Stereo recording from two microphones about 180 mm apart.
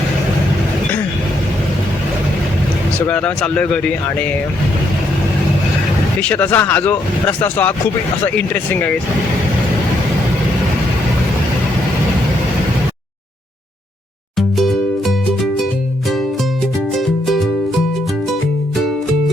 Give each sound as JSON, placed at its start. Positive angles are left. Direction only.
{"t": 3.1, "sound": "speech", "side_deg": 5}
{"t": 6.2, "sound": "speech", "side_deg": 10}
{"t": 14.3, "sound": "music", "side_deg": 0}
{"t": 17.2, "sound": "music", "side_deg": 0}